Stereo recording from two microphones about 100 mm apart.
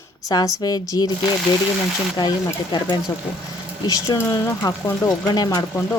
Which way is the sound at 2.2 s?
50° left (ahead or behind).